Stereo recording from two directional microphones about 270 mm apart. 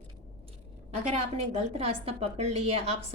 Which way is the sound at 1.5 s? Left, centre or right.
Right.